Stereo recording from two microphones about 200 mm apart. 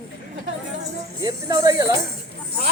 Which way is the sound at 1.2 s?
15° right (ahead or behind).